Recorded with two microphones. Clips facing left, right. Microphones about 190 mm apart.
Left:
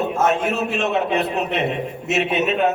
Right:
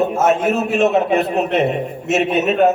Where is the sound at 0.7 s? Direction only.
45° right (ahead or behind).